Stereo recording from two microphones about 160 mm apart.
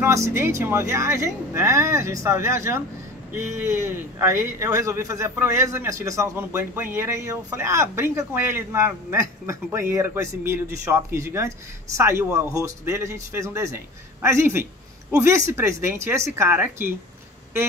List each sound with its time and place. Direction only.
0.0 s a man's voice: 20° right (ahead or behind)